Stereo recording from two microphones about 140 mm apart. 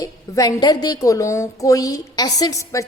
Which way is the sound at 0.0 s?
25° left (ahead or behind).